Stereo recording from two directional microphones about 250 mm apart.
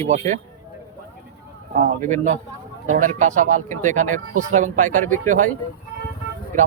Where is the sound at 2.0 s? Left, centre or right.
Right.